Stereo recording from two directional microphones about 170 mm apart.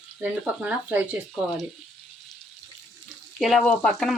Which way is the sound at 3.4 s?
Centre (ahead or behind).